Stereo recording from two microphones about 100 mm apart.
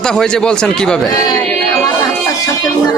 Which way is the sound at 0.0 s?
5° left (ahead or behind).